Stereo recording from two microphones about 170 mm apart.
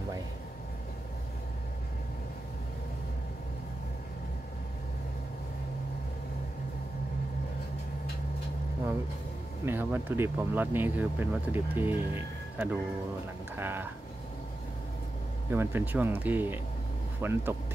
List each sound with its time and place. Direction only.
9.7 s speech: 10° right (ahead or behind)
15.5 s speech: 15° right (ahead or behind)